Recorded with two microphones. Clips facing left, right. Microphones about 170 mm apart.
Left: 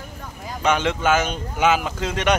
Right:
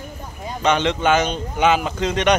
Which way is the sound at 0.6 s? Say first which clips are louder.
Right 2 dB; 5° left (ahead or behind).